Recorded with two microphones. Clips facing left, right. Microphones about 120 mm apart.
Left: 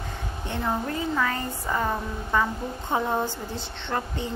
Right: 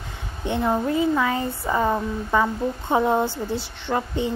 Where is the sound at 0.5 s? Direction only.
15° right (ahead or behind).